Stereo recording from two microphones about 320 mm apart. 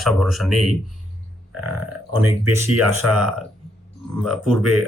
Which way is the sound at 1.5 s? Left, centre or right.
Right.